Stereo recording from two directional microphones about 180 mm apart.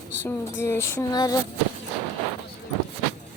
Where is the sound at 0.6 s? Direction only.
15° left (ahead or behind).